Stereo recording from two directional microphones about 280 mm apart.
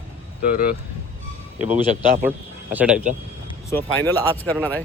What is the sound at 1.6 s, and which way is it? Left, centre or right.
Speech, centre.